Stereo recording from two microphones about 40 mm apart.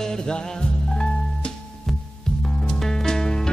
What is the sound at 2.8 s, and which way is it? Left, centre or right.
Music, centre.